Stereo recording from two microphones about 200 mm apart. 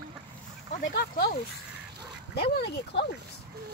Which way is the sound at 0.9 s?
50° left (ahead or behind).